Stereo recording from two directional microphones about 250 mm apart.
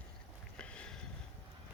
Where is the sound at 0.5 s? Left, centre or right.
Centre.